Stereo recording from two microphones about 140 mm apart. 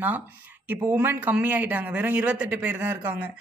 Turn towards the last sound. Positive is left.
turn(degrees=-10)  # may be behind; listen again after turning